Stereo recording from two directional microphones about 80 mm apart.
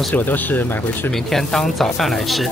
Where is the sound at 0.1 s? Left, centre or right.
Left.